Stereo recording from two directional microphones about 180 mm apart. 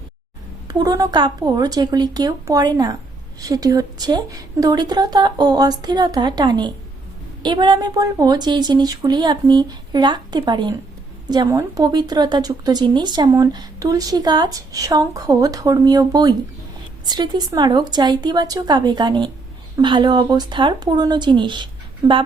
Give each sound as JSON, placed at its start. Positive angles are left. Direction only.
{"t": 0.7, "sound": "speech", "side_deg": -20}